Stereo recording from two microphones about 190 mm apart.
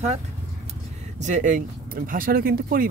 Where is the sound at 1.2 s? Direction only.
40° right (ahead or behind).